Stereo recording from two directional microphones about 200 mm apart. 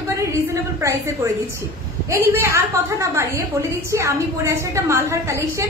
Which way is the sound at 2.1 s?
15° right (ahead or behind).